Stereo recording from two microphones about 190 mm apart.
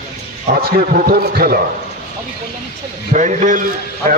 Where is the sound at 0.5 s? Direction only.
50° right (ahead or behind).